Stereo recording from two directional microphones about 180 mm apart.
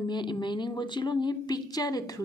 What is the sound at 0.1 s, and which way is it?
A woman's voice, 25° left (ahead or behind).